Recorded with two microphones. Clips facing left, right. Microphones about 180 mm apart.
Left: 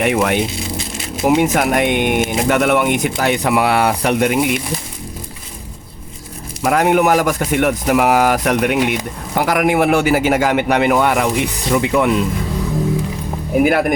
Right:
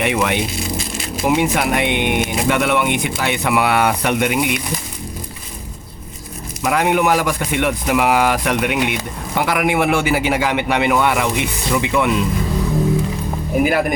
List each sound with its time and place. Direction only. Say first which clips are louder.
0.0 s speech: left 3 dB; 45° left (ahead or behind); by 4.7 s 30° left (ahead or behind)
6.6 s speech: left 3 dB; 45° left (ahead or behind)
13.6 s speech: left 3 dB; 60° left (ahead or behind)